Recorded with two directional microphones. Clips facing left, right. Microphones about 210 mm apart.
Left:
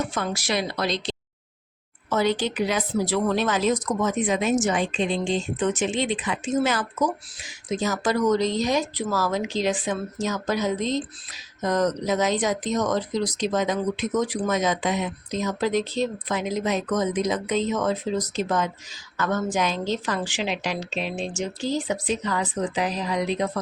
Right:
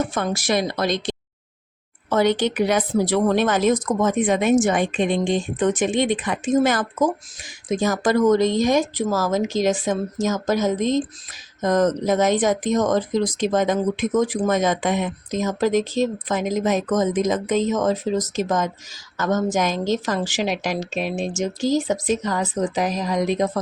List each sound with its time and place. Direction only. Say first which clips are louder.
0.1 s speech: right 4 dB; 50° right (ahead or behind)
2.6 s a woman's voice: right 5 dB; 55° right (ahead or behind)